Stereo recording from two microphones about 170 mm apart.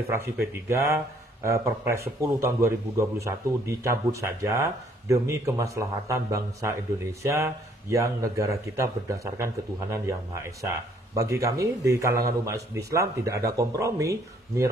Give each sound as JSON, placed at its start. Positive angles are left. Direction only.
{"t": 0.1, "sound": "a man's voice", "side_deg": -15}